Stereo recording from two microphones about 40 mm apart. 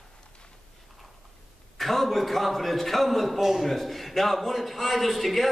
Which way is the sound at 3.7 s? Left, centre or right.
Centre.